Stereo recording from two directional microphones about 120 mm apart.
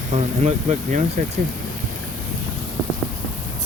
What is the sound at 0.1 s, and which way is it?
Speech, 70° right (ahead or behind).